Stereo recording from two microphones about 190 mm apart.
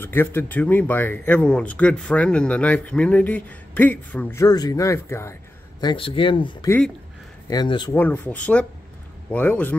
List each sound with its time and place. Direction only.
0.0 s speech: 10° left (ahead or behind)
5.8 s speech: 25° left (ahead or behind)
7.9 s speech: 10° left (ahead or behind)